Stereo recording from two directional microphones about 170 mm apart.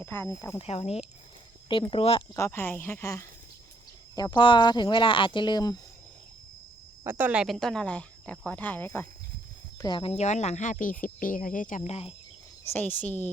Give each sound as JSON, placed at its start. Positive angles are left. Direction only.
{"t": 0.0, "sound": "speech", "side_deg": 15}
{"t": 0.6, "sound": "speech", "side_deg": 35}
{"t": 2.3, "sound": "speech", "side_deg": 15}
{"t": 7.0, "sound": "speech", "side_deg": -10}
{"t": 9.8, "sound": "speech", "side_deg": 30}
{"t": 12.7, "sound": "speech", "side_deg": 10}